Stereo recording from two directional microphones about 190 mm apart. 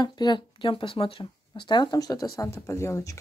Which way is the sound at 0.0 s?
20° left (ahead or behind).